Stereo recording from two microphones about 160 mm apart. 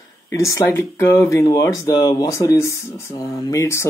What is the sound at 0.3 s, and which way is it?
Speech, 20° left (ahead or behind).